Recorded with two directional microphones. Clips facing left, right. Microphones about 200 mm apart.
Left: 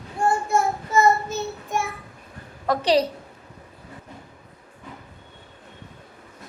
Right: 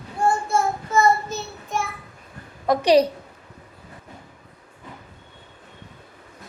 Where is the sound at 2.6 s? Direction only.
15° right (ahead or behind).